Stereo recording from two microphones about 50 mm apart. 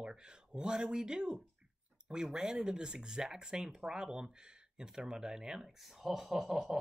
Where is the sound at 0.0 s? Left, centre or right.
Centre.